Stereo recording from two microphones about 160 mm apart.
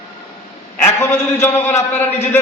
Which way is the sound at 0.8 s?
15° left (ahead or behind).